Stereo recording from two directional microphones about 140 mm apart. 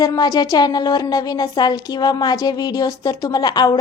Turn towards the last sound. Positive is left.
turn(degrees=30)  # may be behind; listen again after turning